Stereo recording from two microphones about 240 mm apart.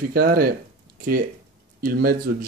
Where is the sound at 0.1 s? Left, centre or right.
Right.